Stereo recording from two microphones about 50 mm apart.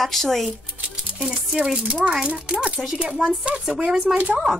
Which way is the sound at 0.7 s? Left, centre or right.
Right.